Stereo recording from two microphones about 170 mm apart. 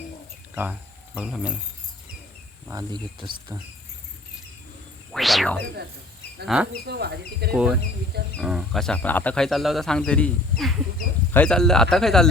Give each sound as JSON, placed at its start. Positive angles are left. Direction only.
{"t": 0.5, "sound": "speech", "side_deg": -10}
{"t": 2.6, "sound": "speech", "side_deg": -25}
{"t": 5.1, "sound": "a sound", "side_deg": 0}
{"t": 6.5, "sound": "speech", "side_deg": 0}
{"t": 6.8, "sound": "speech", "side_deg": -75}
{"t": 7.5, "sound": "speech", "side_deg": -5}